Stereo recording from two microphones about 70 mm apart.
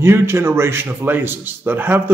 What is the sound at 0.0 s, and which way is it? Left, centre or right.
A man's voice, right.